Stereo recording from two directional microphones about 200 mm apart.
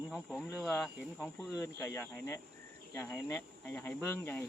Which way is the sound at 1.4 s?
15° left (ahead or behind).